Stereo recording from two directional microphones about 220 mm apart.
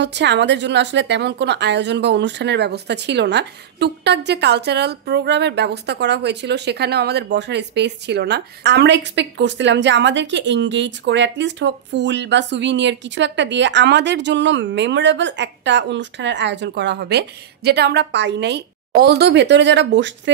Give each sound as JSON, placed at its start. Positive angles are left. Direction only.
{"t": 0.0, "sound": "a woman's voice", "side_deg": -50}